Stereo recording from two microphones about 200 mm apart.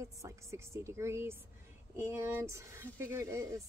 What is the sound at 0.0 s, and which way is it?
Speech, 15° right (ahead or behind).